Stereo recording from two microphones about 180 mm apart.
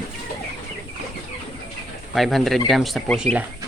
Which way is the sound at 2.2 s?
Centre (ahead or behind).